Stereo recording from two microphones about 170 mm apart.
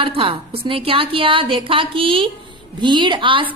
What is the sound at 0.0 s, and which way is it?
A woman's voice, 30° right (ahead or behind).